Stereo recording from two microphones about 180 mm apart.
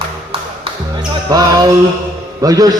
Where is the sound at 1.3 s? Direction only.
20° right (ahead or behind).